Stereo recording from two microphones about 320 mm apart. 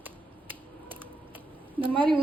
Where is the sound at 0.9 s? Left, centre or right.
Centre.